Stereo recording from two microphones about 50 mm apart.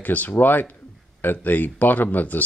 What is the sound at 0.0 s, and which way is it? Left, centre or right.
Speech, left.